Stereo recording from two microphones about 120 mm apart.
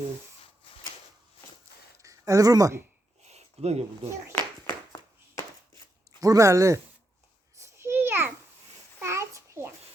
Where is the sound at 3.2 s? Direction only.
65° right (ahead or behind).